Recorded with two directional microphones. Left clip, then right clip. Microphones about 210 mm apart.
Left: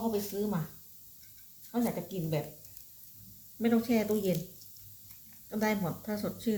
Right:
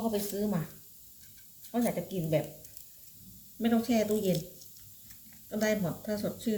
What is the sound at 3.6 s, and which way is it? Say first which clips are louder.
Speech: right 1 dB; 25° left (ahead or behind).